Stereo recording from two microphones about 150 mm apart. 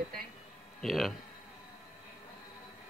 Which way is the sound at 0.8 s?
Centre (ahead or behind).